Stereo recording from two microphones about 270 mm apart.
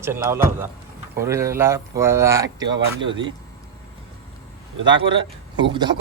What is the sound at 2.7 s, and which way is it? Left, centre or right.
Speech, right.